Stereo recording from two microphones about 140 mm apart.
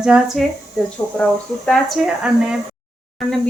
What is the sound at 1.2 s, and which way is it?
Speech, 5° left (ahead or behind).